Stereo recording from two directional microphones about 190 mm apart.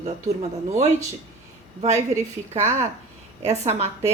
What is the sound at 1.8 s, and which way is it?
Speech, 35° right (ahead or behind).